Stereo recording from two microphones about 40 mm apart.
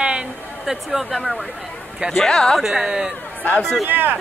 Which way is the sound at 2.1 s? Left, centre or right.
Centre.